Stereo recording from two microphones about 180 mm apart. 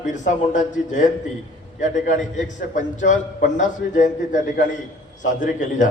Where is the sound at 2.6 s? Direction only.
45° left (ahead or behind).